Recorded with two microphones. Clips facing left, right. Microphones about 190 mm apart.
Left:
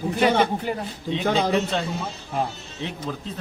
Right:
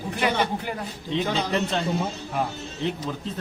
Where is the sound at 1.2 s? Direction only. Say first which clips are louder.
Left 7 dB; 50° left (ahead or behind).